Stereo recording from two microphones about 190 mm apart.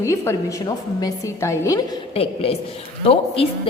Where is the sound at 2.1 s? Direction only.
30° left (ahead or behind).